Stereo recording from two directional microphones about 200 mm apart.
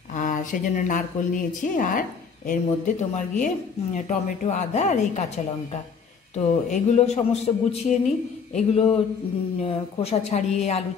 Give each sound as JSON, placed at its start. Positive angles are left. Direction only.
{"t": 0.1, "sound": "a woman's voice", "side_deg": 40}
{"t": 6.3, "sound": "a woman's voice", "side_deg": 35}
{"t": 8.5, "sound": "a sound", "side_deg": 30}
{"t": 9.6, "sound": "a woman's voice", "side_deg": 30}